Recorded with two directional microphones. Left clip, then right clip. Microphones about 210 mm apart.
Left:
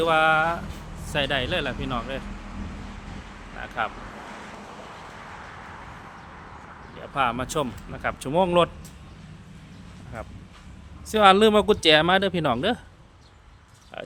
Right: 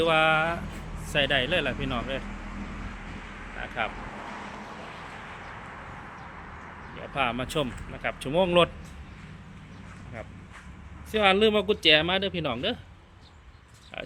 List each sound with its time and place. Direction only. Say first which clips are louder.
0.0 s speech: left 3 dB; 5° left (ahead or behind)
3.6 s vehicle: left 3 dB; 5° left (ahead or behind)
6.9 s speech: left 4 dB; 5° left (ahead or behind)
11.1 s speech: left 5 dB; 20° left (ahead or behind)
13.9 s speech: left 1 dB; 15° left (ahead or behind)